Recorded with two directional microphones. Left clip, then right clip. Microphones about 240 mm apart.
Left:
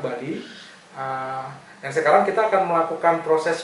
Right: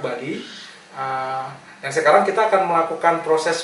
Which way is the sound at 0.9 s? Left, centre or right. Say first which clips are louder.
Right 3 dB; centre.